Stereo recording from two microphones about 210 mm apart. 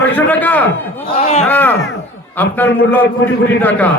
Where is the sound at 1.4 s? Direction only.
10° left (ahead or behind).